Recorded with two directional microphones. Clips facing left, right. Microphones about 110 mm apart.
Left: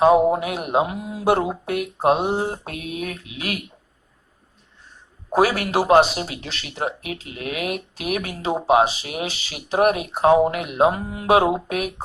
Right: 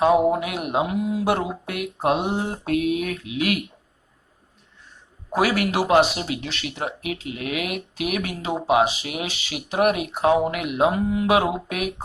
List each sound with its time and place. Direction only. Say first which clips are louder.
0.0 s speech: left 2 dB; 35° left (ahead or behind)
5.3 s speech: left 2 dB; 35° left (ahead or behind)